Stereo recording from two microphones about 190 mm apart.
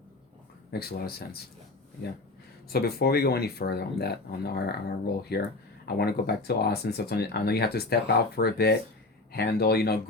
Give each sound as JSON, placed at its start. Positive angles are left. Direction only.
{"t": 0.7, "sound": "speech", "side_deg": 55}
{"t": 2.6, "sound": "speech", "side_deg": 55}